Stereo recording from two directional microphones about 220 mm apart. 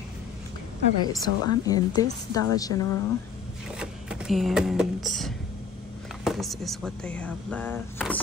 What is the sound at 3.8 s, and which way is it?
Speech, 5° right (ahead or behind).